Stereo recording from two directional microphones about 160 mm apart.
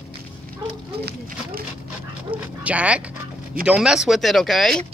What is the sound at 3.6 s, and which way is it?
Speech, 5° right (ahead or behind).